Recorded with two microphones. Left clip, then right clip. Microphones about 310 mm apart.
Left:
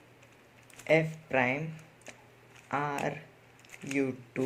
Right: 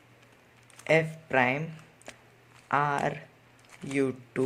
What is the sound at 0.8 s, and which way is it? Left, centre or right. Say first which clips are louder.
Speech: right 2 dB; right.